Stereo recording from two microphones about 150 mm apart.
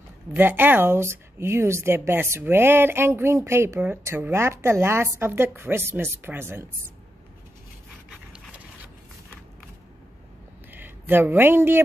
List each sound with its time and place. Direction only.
0.3 s speech: 15° right (ahead or behind)
10.7 s speech: 15° right (ahead or behind)